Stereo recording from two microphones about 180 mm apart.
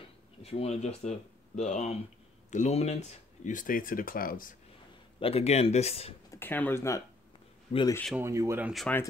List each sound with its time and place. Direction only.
0.4 s speech: 35° left (ahead or behind); by 4.6 s 50° left (ahead or behind)
5.2 s speech: 35° left (ahead or behind)
6.3 s speech: 10° left (ahead or behind)
8.2 s speech: 15° right (ahead or behind)
8.7 s speech: 5° left (ahead or behind)